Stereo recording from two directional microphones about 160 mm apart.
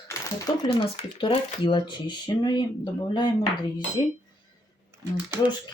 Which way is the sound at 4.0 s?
30° left (ahead or behind).